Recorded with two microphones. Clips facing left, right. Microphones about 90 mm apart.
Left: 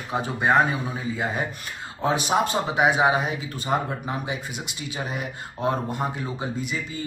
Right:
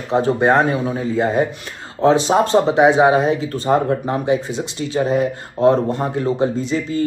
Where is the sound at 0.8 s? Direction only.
50° right (ahead or behind).